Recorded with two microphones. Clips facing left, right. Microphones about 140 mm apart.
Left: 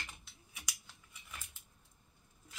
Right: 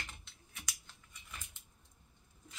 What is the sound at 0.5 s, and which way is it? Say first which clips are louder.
Scissors: right 1 dB; 10° left (ahead or behind).